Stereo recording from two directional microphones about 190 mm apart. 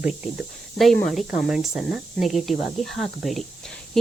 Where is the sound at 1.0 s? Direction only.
Centre (ahead or behind).